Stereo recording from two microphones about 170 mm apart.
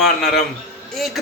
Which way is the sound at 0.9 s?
Centre (ahead or behind).